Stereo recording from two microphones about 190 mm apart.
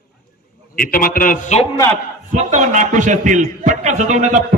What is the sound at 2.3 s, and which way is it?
A man's voice, 40° right (ahead or behind).